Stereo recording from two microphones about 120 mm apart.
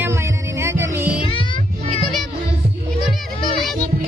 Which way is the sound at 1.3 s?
45° left (ahead or behind).